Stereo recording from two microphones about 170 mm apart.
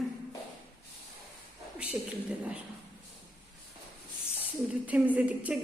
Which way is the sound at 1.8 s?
10° right (ahead or behind).